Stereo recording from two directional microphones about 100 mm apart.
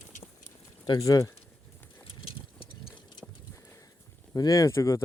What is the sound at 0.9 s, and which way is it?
Speech, 35° left (ahead or behind).